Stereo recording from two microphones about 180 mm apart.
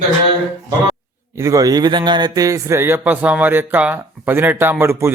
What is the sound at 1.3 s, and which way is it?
A man's voice, 20° right (ahead or behind).